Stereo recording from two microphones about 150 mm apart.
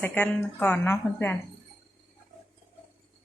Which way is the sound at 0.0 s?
10° left (ahead or behind).